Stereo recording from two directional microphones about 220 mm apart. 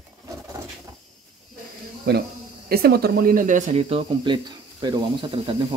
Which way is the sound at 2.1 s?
45° right (ahead or behind).